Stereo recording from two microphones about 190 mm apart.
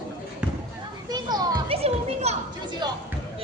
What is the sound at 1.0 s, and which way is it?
Speech, 20° right (ahead or behind).